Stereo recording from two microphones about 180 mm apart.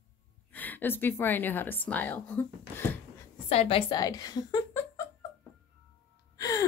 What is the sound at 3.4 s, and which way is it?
Speech, 35° left (ahead or behind).